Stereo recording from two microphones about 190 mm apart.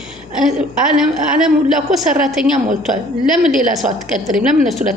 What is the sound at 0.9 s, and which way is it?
A woman's voice, centre (ahead or behind).